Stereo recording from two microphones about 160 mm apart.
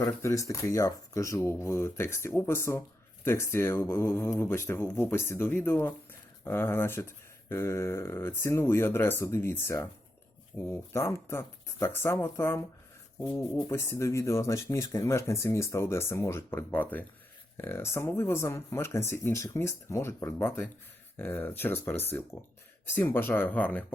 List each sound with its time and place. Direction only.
0.0 s speech: 20° left (ahead or behind)